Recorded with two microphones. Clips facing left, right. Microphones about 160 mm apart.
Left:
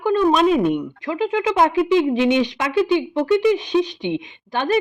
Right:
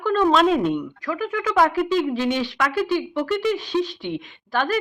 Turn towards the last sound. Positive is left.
turn(degrees=20)  # may be behind; listen again after turning